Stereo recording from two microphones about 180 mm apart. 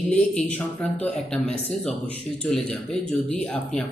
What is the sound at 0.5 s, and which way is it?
Speech, 10° left (ahead or behind).